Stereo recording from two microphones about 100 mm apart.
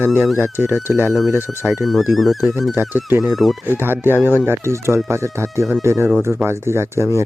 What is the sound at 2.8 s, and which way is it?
Speech, 20° right (ahead or behind).